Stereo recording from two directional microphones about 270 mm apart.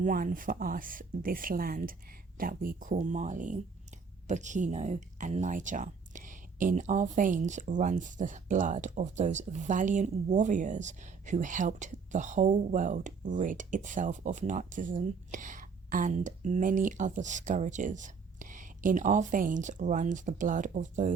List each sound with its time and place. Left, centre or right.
0.0 s speech: right